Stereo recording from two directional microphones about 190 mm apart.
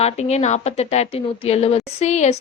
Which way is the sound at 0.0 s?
35° left (ahead or behind).